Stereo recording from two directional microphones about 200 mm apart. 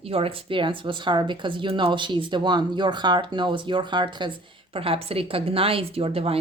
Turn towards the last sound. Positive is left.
turn(degrees=-30)  # may be behind; listen again after turning